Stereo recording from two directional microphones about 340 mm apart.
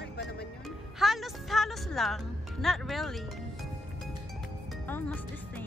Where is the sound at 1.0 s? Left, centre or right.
Centre.